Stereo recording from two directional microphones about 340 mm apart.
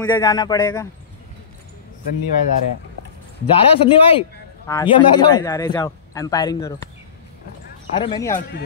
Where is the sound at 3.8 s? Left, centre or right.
Centre.